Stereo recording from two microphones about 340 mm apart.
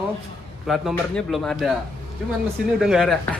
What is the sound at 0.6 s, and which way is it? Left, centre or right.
Speech, centre.